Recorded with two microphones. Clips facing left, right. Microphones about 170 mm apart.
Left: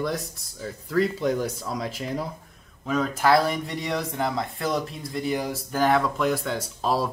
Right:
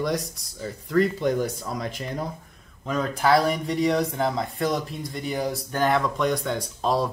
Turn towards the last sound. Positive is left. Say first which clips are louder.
# right 1 dB
turn(degrees=5)  # may be behind; listen again after turning